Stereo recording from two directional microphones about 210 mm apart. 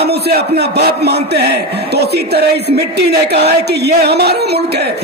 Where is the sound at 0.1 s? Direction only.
50° right (ahead or behind).